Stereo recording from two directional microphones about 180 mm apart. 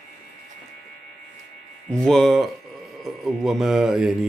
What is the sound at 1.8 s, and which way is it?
Speech, 5° left (ahead or behind).